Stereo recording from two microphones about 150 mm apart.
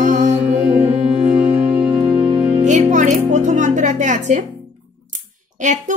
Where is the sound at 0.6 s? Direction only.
15° right (ahead or behind).